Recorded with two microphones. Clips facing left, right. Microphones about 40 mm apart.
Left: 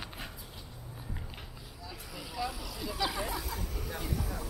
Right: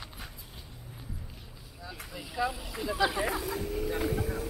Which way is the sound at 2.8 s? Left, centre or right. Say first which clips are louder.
Right 6 dB; right.